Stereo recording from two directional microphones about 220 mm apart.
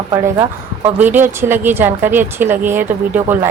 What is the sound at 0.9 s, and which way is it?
A woman's voice, 10° right (ahead or behind).